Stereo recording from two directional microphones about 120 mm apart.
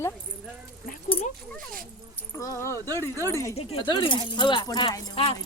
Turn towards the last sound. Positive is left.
turn(degrees=55)  # may be behind; listen again after turning